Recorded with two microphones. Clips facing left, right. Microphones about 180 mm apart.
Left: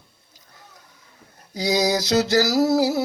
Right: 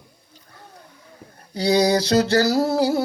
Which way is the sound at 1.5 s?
30° right (ahead or behind).